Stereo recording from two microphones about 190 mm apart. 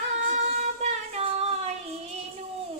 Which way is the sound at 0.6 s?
35° right (ahead or behind).